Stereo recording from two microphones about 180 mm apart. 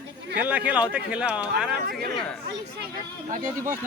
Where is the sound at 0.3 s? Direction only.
10° right (ahead or behind).